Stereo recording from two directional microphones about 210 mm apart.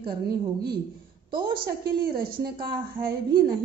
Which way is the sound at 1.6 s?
45° right (ahead or behind).